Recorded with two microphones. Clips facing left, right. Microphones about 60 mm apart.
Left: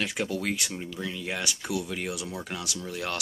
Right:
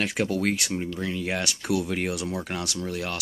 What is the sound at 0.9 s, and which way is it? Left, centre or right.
Speech, right.